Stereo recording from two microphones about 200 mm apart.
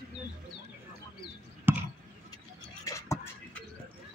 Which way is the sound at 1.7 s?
10° right (ahead or behind).